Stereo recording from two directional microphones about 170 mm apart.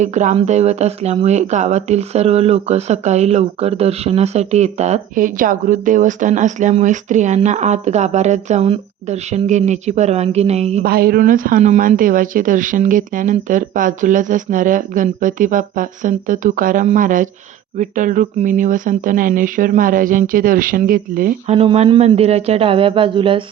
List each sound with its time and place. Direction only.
0.0 s speech: 45° right (ahead or behind)
10.8 s speech: 65° right (ahead or behind)
21.5 s speech: 35° right (ahead or behind)